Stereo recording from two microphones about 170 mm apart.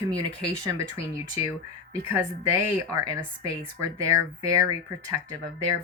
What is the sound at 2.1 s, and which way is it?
Speech, 20° right (ahead or behind).